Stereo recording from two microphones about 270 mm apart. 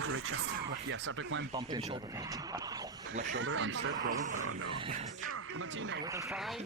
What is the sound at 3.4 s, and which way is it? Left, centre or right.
Speech, right.